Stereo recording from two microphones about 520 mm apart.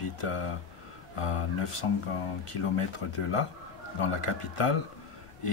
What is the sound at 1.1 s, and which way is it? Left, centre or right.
Speech, left.